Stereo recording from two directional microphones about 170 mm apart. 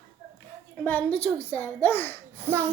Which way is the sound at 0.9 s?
10° left (ahead or behind).